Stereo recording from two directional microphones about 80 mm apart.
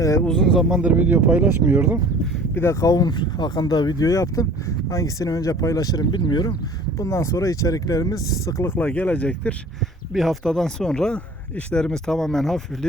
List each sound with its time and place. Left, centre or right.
0.0 s a sound: left
0.3 s speech: centre
0.7 s speech: centre
2.8 s speech: left
7.0 s speech: left
8.6 s speech: left
8.9 s speech: centre
10.1 s speech: centre